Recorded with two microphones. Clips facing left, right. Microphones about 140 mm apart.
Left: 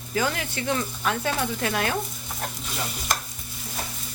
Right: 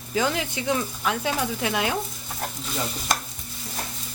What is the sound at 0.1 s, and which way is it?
Speech, 15° right (ahead or behind).